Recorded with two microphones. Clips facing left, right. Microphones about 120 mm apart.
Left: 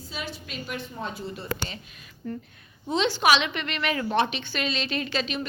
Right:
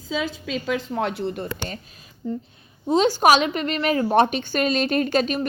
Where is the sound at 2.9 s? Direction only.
40° right (ahead or behind).